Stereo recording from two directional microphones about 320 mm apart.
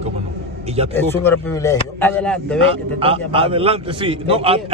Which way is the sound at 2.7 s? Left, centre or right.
Centre.